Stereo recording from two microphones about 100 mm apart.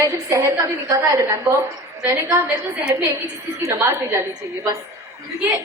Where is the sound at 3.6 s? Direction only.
30° right (ahead or behind).